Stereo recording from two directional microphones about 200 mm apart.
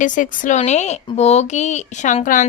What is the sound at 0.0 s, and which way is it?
Speech, 40° left (ahead or behind).